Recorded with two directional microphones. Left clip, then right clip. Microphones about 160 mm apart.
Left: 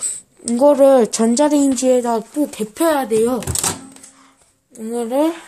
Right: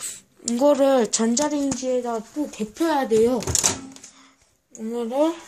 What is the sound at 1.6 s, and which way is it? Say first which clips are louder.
Speech: left 9 dB; 55° left (ahead or behind).